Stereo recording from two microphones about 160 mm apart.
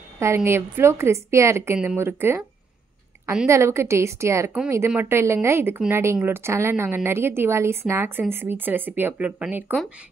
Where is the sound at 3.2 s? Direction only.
5° right (ahead or behind).